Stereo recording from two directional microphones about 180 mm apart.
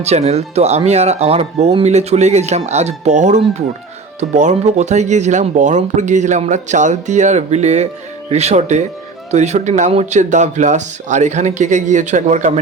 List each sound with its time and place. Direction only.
0.0 s speech: 35° right (ahead or behind)